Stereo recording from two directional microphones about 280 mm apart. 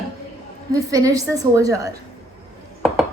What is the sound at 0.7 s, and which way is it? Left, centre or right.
A woman's voice, centre.